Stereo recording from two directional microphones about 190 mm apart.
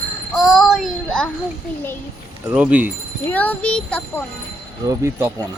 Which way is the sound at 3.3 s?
10° left (ahead or behind).